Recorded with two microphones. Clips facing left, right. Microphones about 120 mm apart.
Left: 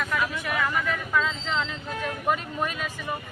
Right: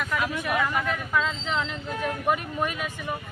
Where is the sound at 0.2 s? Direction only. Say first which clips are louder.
Right 1 dB; 20° right (ahead or behind).